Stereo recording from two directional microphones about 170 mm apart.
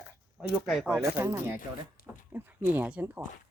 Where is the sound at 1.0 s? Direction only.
15° right (ahead or behind).